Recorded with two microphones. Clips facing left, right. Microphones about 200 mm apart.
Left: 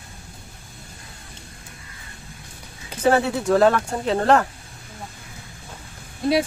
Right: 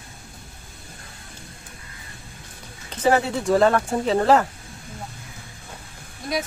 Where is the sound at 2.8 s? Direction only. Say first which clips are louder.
Left 1 dB; centre (ahead or behind).